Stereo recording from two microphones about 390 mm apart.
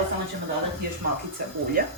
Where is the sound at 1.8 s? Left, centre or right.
Right.